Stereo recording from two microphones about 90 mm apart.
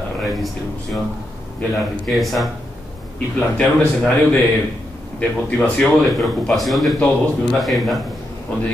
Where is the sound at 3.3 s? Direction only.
10° left (ahead or behind).